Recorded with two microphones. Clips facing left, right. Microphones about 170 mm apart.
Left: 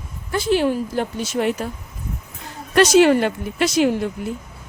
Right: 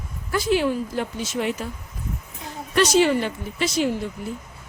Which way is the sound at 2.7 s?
80° left.